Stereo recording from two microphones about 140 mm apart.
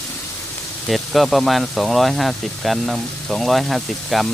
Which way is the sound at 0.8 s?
Centre (ahead or behind).